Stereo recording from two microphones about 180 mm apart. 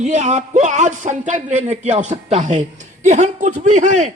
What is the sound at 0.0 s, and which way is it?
A man's voice, 40° right (ahead or behind).